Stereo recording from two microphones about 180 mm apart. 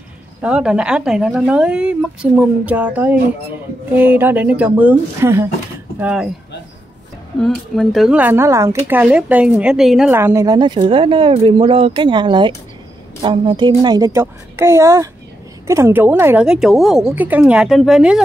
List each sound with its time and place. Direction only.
0.4 s speech: 5° right (ahead or behind)
7.3 s a woman's voice: centre (ahead or behind)